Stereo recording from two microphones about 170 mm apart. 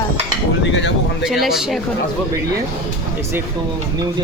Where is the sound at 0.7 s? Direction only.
90° left.